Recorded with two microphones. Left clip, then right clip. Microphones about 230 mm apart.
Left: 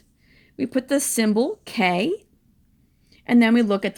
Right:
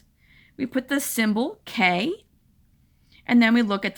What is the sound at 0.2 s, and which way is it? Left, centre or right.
Speech, centre.